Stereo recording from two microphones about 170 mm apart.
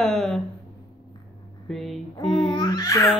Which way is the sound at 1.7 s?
Centre (ahead or behind).